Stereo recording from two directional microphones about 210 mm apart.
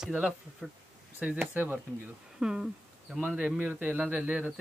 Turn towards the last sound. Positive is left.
turn(degrees=-5)  # may be behind; listen again after turning